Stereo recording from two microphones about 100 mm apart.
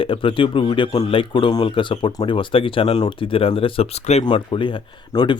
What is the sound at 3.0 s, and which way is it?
Speech, 55° left (ahead or behind).